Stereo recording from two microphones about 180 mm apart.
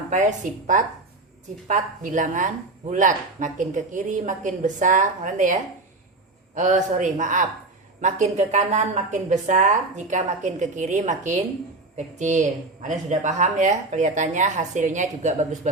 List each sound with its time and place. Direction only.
0.1 s a woman's voice: 45° right (ahead or behind)